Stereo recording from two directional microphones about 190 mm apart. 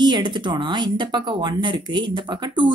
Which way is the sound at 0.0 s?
25° right (ahead or behind).